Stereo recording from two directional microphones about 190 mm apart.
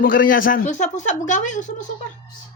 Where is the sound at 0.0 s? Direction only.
45° left (ahead or behind).